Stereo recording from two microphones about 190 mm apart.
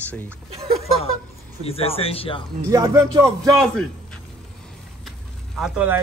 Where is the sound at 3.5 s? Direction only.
5° left (ahead or behind).